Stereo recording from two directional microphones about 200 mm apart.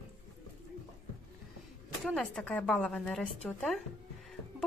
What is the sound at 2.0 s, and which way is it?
A woman's voice, centre (ahead or behind).